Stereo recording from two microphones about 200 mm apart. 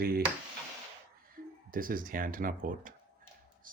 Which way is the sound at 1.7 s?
45° right (ahead or behind).